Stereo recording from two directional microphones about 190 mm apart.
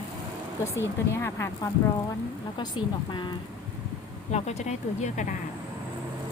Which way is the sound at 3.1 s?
25° left (ahead or behind).